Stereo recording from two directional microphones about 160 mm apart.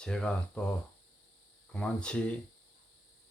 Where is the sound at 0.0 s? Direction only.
5° left (ahead or behind).